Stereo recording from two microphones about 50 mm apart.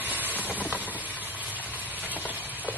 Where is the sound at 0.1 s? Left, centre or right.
Right.